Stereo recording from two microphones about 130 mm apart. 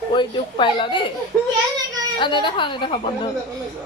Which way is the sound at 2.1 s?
40° left (ahead or behind).